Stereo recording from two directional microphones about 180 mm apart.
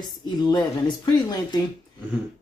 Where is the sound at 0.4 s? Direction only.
25° left (ahead or behind).